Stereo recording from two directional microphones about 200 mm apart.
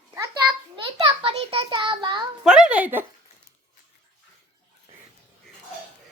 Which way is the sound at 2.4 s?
5° right (ahead or behind).